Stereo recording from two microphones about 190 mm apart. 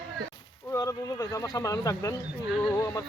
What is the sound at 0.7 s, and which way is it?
Speech, 15° left (ahead or behind).